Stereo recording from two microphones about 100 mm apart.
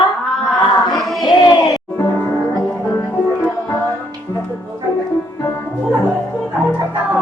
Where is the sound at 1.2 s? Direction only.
40° left (ahead or behind).